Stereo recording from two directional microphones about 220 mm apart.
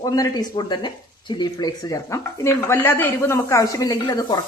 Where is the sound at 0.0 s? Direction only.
15° left (ahead or behind).